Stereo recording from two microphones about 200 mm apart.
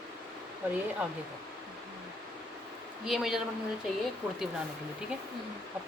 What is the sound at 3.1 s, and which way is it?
Speech, centre (ahead or behind).